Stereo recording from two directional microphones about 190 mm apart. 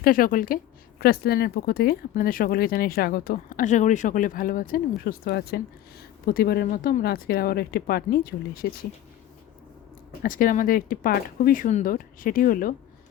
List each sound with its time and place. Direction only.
0.0 s speech: 45° left (ahead or behind)
10.2 s speech: 45° left (ahead or behind)